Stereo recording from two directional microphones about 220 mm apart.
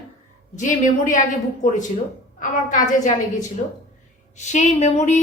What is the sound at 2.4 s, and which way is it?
A woman's voice, 35° left (ahead or behind).